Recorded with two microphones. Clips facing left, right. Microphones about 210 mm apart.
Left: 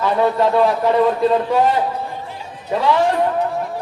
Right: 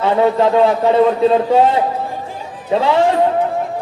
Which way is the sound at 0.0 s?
25° right (ahead or behind).